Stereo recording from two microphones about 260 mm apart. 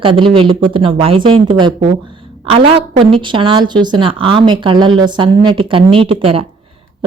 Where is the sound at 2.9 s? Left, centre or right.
Centre.